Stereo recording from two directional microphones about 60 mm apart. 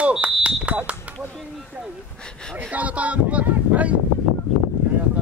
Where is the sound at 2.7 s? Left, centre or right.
Right.